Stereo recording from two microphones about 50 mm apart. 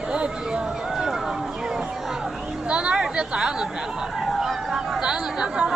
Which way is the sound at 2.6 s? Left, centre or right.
Right.